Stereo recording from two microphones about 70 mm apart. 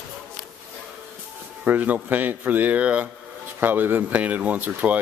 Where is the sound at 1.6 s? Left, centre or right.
Right.